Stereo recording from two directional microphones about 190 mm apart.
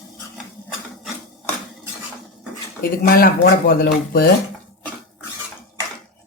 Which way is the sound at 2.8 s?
50° left (ahead or behind).